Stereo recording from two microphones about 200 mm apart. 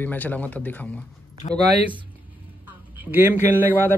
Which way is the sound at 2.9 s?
10° right (ahead or behind).